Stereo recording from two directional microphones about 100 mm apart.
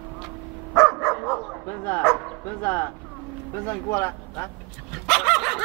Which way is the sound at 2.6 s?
20° left (ahead or behind).